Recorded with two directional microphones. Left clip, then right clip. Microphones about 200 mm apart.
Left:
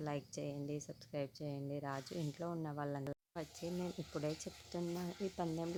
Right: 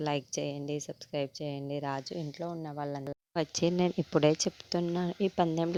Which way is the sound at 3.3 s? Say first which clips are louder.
Right 18 dB; 45° right (ahead or behind).